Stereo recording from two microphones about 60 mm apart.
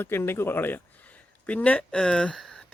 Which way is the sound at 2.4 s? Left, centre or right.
Centre.